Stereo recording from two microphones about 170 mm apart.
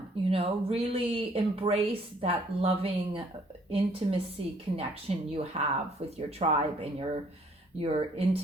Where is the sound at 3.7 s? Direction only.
35° right (ahead or behind).